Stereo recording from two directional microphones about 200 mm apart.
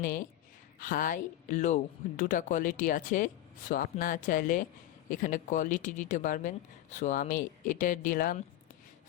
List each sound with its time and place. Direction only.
0.0 s speech: 40° left (ahead or behind)